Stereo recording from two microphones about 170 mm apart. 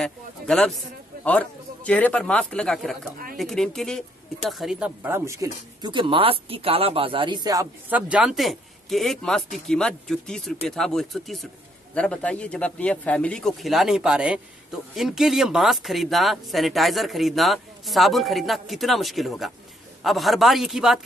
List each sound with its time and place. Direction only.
0.0 s a man's voice: 5° left (ahead or behind); by 7.6 s 25° right (ahead or behind)
7.9 s a man's voice: 5° right (ahead or behind)